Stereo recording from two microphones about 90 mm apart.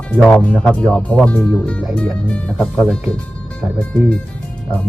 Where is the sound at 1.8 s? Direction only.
Centre (ahead or behind).